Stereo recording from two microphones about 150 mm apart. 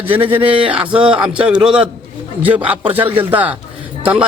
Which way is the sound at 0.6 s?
10° right (ahead or behind).